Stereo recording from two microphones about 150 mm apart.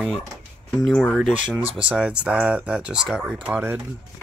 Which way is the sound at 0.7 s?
Centre (ahead or behind).